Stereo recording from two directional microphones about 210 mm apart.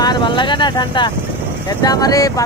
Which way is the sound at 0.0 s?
20° left (ahead or behind).